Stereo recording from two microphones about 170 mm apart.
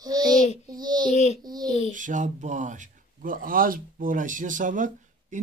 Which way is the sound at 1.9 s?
50° right (ahead or behind).